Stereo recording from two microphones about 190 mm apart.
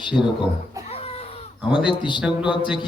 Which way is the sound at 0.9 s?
30° left (ahead or behind).